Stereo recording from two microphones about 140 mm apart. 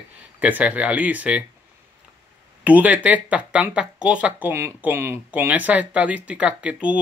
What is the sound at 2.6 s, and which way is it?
Speech, 10° right (ahead or behind).